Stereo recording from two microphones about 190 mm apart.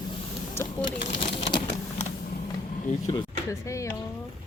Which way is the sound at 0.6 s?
35° left (ahead or behind).